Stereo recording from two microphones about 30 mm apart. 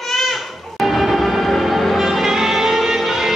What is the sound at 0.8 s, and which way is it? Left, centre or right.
Train, centre.